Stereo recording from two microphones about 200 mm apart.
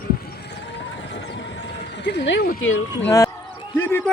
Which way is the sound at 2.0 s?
60° left (ahead or behind).